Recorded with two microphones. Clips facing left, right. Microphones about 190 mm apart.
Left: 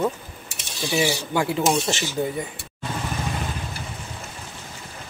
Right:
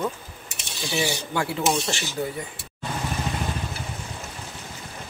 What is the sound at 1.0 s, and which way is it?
Speech, 15° left (ahead or behind).